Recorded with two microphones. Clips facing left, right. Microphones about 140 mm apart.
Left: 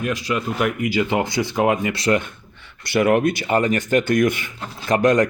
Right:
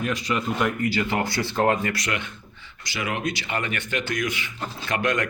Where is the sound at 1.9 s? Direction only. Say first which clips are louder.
Left 8 dB; 30° left (ahead or behind).